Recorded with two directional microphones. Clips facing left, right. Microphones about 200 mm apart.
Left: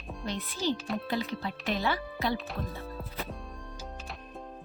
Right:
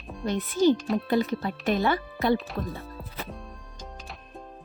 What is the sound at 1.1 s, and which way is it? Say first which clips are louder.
Speech: right 8 dB; 50° right (ahead or behind).